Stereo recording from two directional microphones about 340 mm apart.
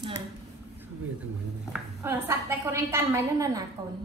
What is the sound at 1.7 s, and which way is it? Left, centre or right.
A woman's voice, centre.